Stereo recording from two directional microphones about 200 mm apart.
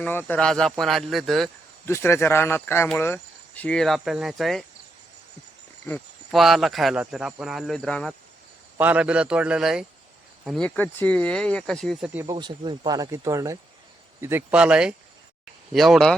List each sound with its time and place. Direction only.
0.0 s speech: 10° left (ahead or behind)
1.9 s speech: 10° left (ahead or behind)
6.3 s speech: centre (ahead or behind)
8.8 s speech: 5° right (ahead or behind)
12.2 s speech: 20° right (ahead or behind); by 16.1 s centre (ahead or behind)